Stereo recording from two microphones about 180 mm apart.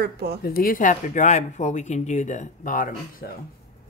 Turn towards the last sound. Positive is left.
turn(degrees=50)  # may be behind; listen again after turning